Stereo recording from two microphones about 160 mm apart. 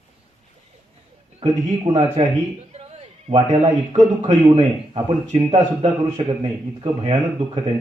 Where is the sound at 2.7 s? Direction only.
40° right (ahead or behind).